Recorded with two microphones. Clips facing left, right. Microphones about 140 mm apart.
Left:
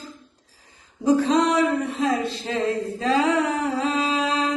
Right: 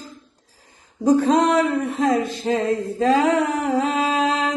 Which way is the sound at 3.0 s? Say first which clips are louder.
Right 4 dB; 45° right (ahead or behind).